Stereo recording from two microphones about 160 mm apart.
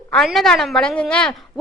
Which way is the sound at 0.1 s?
Centre (ahead or behind).